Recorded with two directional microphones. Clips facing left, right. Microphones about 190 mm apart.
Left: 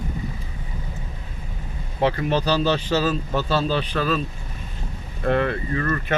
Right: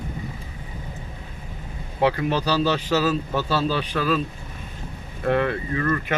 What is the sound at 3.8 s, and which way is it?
Speech, 10° right (ahead or behind).